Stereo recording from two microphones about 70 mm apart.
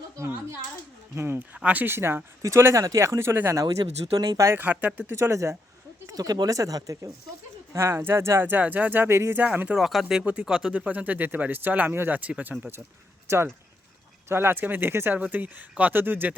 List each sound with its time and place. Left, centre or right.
1.1 s speech: right
1.5 s speech: right
4.0 s speech: right
4.5 s speech: right
5.1 s speech: right
6.1 s speech: right
6.6 s speech: right
7.7 s speech: right
9.6 s speech: centre
10.2 s speech: centre
13.2 s speech: right
15.2 s speech: right